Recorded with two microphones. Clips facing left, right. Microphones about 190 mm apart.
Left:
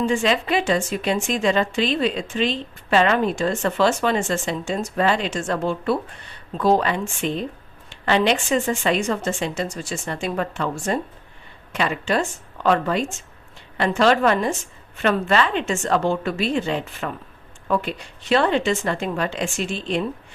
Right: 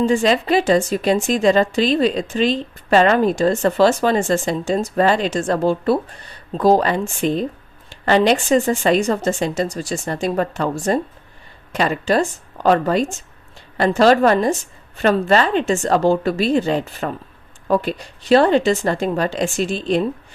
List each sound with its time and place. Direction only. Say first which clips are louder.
0.1 s a woman's voice: right 4 dB; 40° right (ahead or behind)